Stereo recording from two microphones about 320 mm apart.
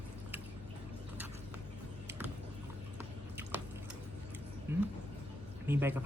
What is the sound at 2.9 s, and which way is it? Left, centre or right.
Squish, centre.